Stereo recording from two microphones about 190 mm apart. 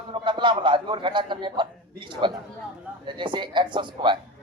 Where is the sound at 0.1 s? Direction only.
25° right (ahead or behind).